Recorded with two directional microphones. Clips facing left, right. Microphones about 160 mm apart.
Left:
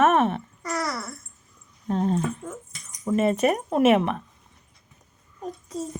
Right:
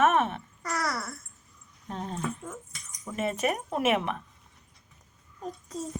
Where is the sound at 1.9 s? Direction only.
50° left (ahead or behind).